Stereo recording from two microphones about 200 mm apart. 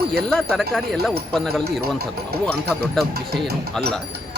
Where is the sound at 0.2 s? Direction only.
Centre (ahead or behind).